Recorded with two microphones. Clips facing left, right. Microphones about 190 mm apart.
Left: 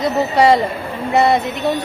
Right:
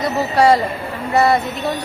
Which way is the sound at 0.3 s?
20° left (ahead or behind).